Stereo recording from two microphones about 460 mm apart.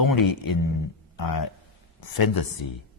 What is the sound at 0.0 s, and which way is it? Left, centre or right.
Speech, left.